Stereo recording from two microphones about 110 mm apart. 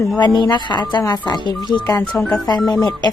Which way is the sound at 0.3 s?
40° left (ahead or behind).